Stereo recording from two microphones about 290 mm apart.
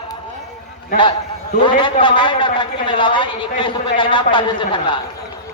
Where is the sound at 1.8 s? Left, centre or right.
Centre.